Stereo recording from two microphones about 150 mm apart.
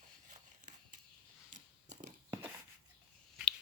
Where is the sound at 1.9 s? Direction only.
60° right (ahead or behind).